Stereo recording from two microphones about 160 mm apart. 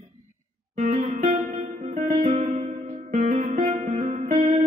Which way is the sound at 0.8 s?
45° right (ahead or behind).